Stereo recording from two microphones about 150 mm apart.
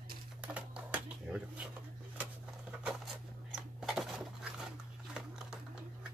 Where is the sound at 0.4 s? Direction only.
10° right (ahead or behind).